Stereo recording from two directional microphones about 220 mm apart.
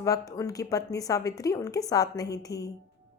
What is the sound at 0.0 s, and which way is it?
A woman's voice, 15° left (ahead or behind).